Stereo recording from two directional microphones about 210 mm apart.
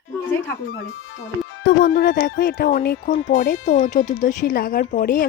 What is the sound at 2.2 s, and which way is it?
Speech, 40° left (ahead or behind).